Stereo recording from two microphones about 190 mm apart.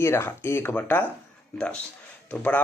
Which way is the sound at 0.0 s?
15° left (ahead or behind).